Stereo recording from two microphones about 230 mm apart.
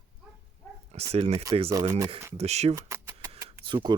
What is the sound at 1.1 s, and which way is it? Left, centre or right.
Speech, right.